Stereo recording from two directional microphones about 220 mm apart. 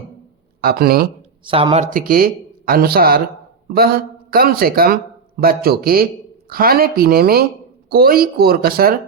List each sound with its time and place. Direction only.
0.6 s speech: 45° right (ahead or behind)
1.5 s speech: 25° right (ahead or behind); by 9.0 s 45° right (ahead or behind)